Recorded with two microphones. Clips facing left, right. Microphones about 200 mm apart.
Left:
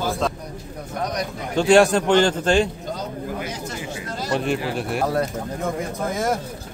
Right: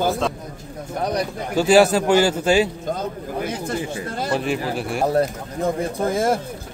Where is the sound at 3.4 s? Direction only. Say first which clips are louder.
Right 5 dB; 55° right (ahead or behind).